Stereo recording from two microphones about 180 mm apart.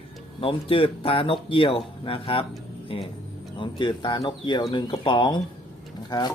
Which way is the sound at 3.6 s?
25° left (ahead or behind).